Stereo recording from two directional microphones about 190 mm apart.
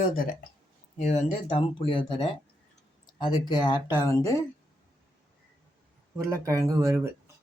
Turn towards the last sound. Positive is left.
turn(degrees=-15)  # may be behind; listen again after turning